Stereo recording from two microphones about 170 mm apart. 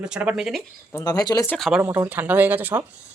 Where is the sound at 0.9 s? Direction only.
20° left (ahead or behind).